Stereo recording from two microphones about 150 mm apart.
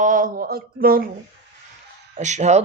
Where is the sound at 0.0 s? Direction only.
65° right (ahead or behind).